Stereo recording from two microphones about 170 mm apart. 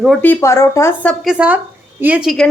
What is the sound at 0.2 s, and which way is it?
Speech, 15° left (ahead or behind).